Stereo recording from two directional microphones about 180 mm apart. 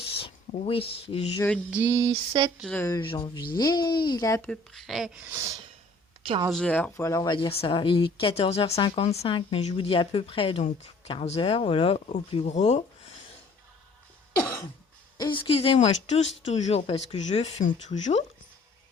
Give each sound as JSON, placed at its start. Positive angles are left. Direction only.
{"t": 0.6, "sound": "speech", "side_deg": 30}
{"t": 1.7, "sound": "a sound", "side_deg": -15}
{"t": 2.6, "sound": "speech", "side_deg": 5}
{"t": 3.0, "sound": "speech", "side_deg": 30}
{"t": 4.4, "sound": "speech", "side_deg": 5}
{"t": 5.3, "sound": "a sound", "side_deg": -15}
{"t": 6.5, "sound": "speech", "side_deg": 5}
{"t": 15.2, "sound": "speech", "side_deg": 30}